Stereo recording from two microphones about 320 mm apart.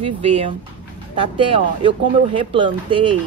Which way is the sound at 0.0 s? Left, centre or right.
Centre.